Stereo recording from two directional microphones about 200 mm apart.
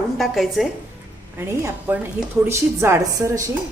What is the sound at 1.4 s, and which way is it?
Speech, 10° right (ahead or behind).